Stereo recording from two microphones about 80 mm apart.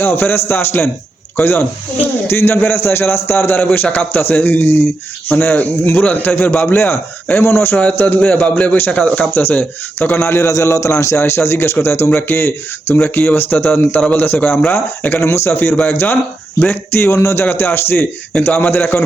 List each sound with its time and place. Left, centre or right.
0.0 s a man's voice: left
7.8 s a man's voice: centre
10.2 s a man's voice: left
17.4 s a man's voice: left